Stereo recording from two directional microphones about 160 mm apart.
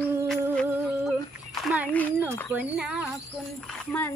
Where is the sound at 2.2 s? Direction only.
10° right (ahead or behind).